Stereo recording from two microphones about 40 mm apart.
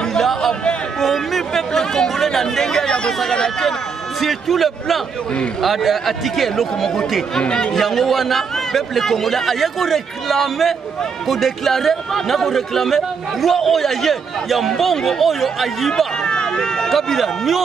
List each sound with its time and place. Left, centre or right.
0.0 s a sound: centre
0.9 s chatter: centre
3.3 s speech: centre
4.2 s a man's voice: centre
7.3 s speech: left
7.7 s a man's voice: centre
16.2 s speech: centre